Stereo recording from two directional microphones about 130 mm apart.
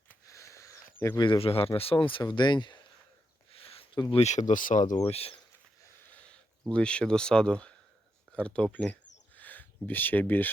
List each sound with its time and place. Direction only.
0.3 s a sound: 25° left (ahead or behind)
1.2 s speech: 45° left (ahead or behind)
3.5 s a sound: 45° left (ahead or behind)
4.1 s speech: 60° left (ahead or behind); by 5.0 s 75° left (ahead or behind)
5.0 s speech: 50° left (ahead or behind)
6.2 s speech: 10° left (ahead or behind)